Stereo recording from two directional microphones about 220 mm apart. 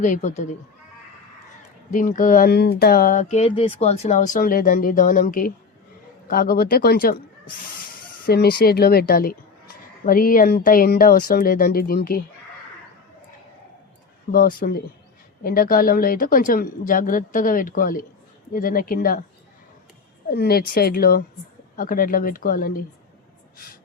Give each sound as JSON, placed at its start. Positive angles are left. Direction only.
{"t": 0.0, "sound": "speech", "side_deg": 35}
{"t": 1.9, "sound": "speech", "side_deg": 35}
{"t": 8.3, "sound": "speech", "side_deg": 45}
{"t": 14.3, "sound": "speech", "side_deg": 40}
{"t": 20.2, "sound": "speech", "side_deg": 45}